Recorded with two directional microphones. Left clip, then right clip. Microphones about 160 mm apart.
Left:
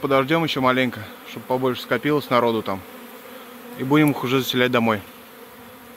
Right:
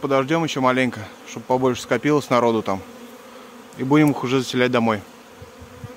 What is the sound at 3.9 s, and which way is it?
Speech, 5° right (ahead or behind).